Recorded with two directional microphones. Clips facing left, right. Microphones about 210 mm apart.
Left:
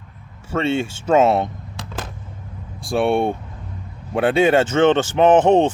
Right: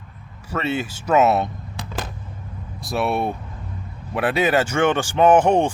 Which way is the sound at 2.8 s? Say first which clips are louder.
Left 4 dB; 30° left (ahead or behind).